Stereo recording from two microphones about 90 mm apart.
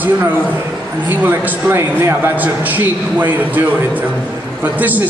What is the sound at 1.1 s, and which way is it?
A man's voice, 20° right (ahead or behind).